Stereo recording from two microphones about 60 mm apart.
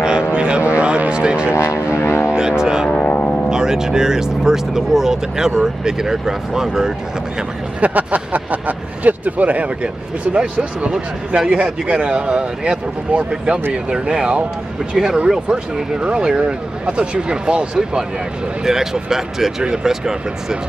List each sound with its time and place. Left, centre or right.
0.3 s vehicle: centre
1.5 s vehicle: left
2.0 s vehicle: left
2.3 s vehicle: centre
2.9 s vehicle: left
3.4 s vehicle: centre
5.6 s speech: centre
7.8 s speech: right; by 20.5 s centre